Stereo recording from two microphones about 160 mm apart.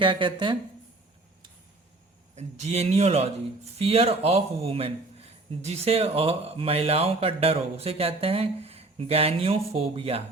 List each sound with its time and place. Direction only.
0.0 s speech: 30° right (ahead or behind)
2.3 s speech: 45° right (ahead or behind)